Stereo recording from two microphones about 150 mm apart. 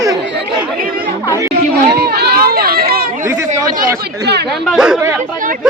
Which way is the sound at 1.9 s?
90° right.